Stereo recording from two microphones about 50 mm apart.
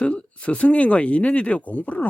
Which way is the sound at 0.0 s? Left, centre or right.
Left.